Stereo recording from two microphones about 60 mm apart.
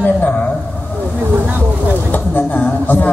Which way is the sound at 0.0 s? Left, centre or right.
Left.